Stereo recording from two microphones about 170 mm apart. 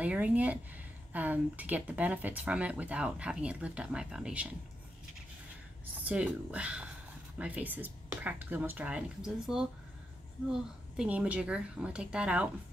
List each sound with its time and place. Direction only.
0.0 s speech: 10° right (ahead or behind)
5.9 s speech: 10° right (ahead or behind)